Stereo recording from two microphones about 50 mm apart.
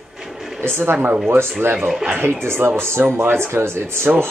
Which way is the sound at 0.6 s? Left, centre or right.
Right.